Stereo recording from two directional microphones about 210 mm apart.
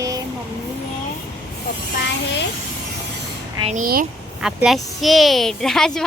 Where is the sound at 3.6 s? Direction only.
35° right (ahead or behind).